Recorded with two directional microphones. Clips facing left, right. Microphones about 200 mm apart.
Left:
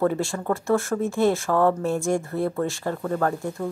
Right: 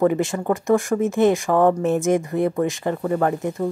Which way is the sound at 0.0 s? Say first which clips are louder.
Right 4 dB; 15° right (ahead or behind).